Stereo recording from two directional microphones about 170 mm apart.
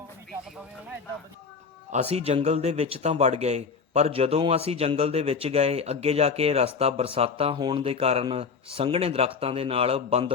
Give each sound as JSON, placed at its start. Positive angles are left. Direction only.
{"t": 1.9, "sound": "speech", "side_deg": -40}